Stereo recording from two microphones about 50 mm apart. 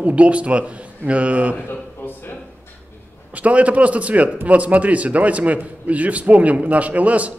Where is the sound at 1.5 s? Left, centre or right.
Left.